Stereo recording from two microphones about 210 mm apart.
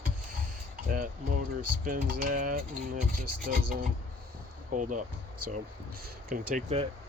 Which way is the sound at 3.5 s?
45° right (ahead or behind).